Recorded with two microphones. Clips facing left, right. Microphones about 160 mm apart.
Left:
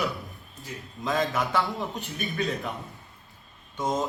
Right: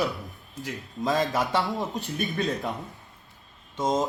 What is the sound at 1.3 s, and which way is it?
Speech, 30° right (ahead or behind).